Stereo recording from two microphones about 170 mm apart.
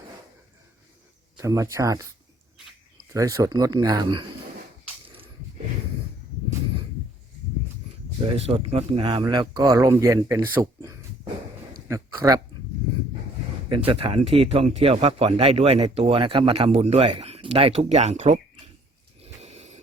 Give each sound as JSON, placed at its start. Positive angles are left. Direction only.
{"t": 1.4, "sound": "speech", "side_deg": -20}
{"t": 3.1, "sound": "speech", "side_deg": -20}
{"t": 8.4, "sound": "speech", "side_deg": -35}
{"t": 13.7, "sound": "speech", "side_deg": -30}
{"t": 19.2, "sound": "snort", "side_deg": -40}